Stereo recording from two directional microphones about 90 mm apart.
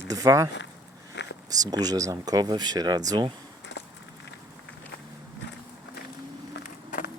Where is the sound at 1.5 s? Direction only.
45° right (ahead or behind).